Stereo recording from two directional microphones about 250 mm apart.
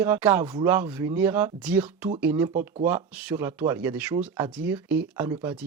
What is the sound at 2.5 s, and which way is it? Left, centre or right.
Speech, right.